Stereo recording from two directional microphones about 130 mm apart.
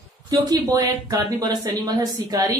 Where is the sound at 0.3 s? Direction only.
25° right (ahead or behind).